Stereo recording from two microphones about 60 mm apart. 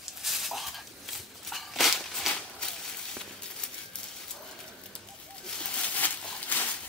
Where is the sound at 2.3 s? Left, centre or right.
Centre.